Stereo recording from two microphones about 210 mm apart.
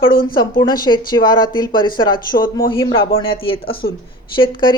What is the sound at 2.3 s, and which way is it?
Speech, 45° left (ahead or behind).